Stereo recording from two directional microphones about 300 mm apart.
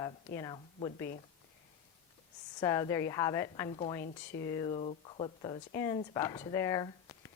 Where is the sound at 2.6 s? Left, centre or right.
Centre.